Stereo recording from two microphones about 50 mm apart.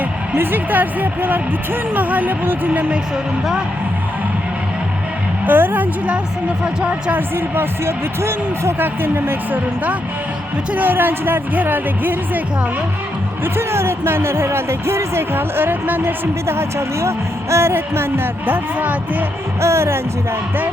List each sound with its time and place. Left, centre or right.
0.3 s speech: right
5.5 s speech: right
7.1 s speech: right
8.8 s speech: right
13.4 s speech: right
16.2 s speech: right
18.4 s speech: right
19.6 s speech: right